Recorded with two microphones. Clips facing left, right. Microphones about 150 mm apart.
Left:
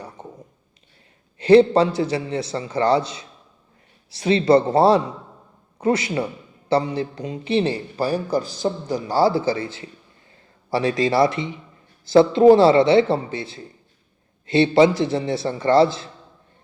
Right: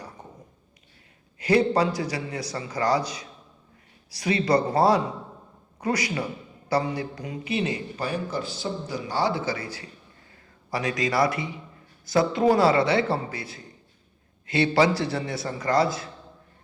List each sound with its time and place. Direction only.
1.4 s a man's voice: 25° left (ahead or behind)